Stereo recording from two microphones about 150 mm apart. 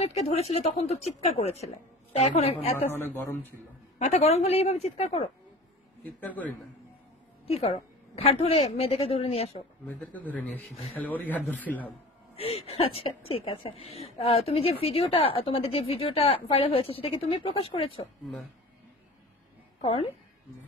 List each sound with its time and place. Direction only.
0.0 s a woman's voice: 45° left (ahead or behind)
2.8 s a man's voice: 15° left (ahead or behind)
4.0 s a woman's voice: 45° left (ahead or behind)
6.2 s a man's voice: 10° left (ahead or behind)
7.4 s a woman's voice: 40° left (ahead or behind)
9.8 s a man's voice: 10° left (ahead or behind)
12.4 s a woman's voice: 40° left (ahead or behind)
18.2 s speech: centre (ahead or behind)
19.8 s a woman's voice: 40° left (ahead or behind)